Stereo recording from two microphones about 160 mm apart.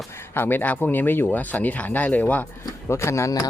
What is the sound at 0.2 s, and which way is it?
Speech, 15° left (ahead or behind).